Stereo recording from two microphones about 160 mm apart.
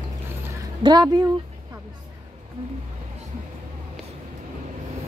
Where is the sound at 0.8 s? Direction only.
25° right (ahead or behind).